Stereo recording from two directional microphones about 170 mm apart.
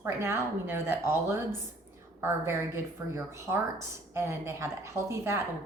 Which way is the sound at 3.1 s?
10° right (ahead or behind).